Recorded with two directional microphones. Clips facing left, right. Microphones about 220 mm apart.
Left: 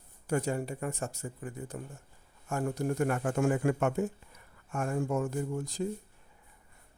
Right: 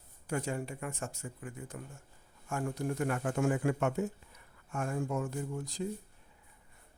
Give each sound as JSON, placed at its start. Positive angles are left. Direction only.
{"t": 0.3, "sound": "speech", "side_deg": 40}